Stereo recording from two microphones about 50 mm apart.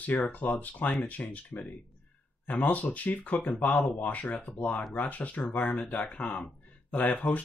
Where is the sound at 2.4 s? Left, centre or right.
Left.